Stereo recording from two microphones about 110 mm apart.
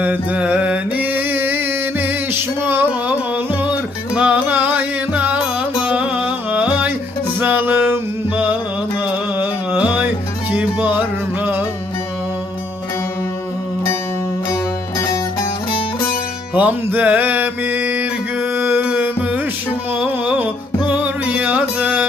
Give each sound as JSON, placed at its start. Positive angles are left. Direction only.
{"t": 0.0, "sound": "music", "side_deg": -15}
{"t": 5.8, "sound": "carnatic music", "side_deg": -10}
{"t": 7.3, "sound": "music", "side_deg": -20}
{"t": 9.0, "sound": "music", "side_deg": -10}
{"t": 14.5, "sound": "music", "side_deg": 30}
{"t": 16.6, "sound": "mantra", "side_deg": -15}
{"t": 19.9, "sound": "a sound", "side_deg": -15}
{"t": 20.8, "sound": "music", "side_deg": -15}